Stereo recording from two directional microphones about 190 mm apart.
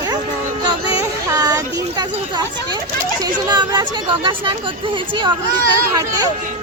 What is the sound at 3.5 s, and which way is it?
Speech, 25° right (ahead or behind).